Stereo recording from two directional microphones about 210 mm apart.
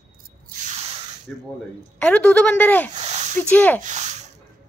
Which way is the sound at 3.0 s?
30° right (ahead or behind).